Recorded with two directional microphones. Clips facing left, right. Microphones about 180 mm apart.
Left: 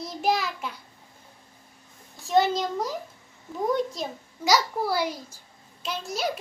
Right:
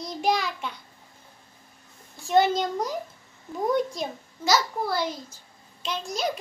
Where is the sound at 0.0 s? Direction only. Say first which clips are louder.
Even; 5° left (ahead or behind).